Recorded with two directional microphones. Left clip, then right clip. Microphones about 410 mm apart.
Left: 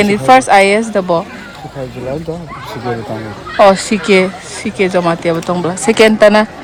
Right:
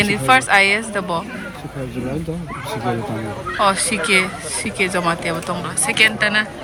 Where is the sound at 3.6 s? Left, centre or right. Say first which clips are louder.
Left 9 dB; centre.